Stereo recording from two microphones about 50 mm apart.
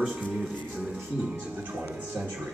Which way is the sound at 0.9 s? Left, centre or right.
Right.